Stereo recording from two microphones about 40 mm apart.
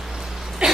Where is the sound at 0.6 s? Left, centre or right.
Right.